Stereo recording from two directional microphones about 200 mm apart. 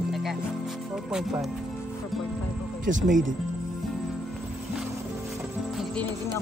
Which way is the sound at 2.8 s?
40° right (ahead or behind).